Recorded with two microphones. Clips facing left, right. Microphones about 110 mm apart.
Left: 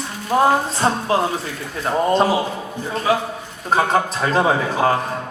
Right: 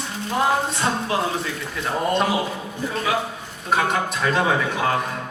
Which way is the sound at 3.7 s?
35° left (ahead or behind).